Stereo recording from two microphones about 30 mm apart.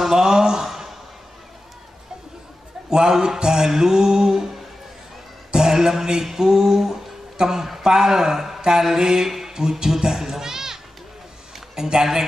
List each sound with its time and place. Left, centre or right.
0.1 s a sound: centre
3.1 s mantra: right
5.5 s a sound: centre
7.8 s speech: centre
8.9 s mantra: centre
9.5 s a child's voice: right